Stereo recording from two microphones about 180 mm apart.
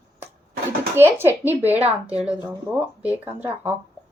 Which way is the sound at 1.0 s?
10° right (ahead or behind).